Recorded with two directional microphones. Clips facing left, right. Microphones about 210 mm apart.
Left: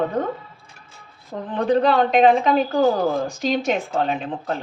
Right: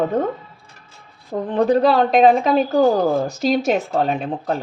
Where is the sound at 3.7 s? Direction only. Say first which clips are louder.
Right 3 dB; 40° right (ahead or behind).